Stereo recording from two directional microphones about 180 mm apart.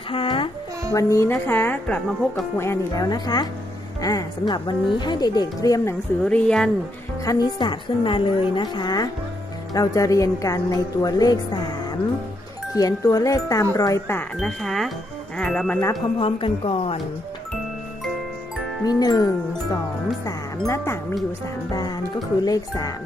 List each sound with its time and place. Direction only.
0.1 s music: 30° left (ahead or behind)
0.9 s a woman's voice: 15° left (ahead or behind)
6.2 s speech: 5° left (ahead or behind)
7.3 s a woman's voice: 25° left (ahead or behind)
14.3 s speech: centre (ahead or behind)
16.1 s speech: 30° left (ahead or behind)
18.9 s a woman's voice: 20° left (ahead or behind)
20.7 s a woman's voice: 15° left (ahead or behind)